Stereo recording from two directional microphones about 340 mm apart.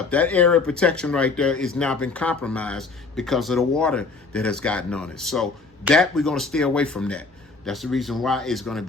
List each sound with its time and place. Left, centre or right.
0.1 s speech: centre